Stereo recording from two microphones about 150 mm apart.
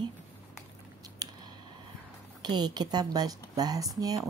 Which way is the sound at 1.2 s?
25° right (ahead or behind).